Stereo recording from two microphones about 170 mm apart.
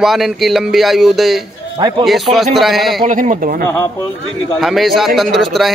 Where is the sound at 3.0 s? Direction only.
50° right (ahead or behind).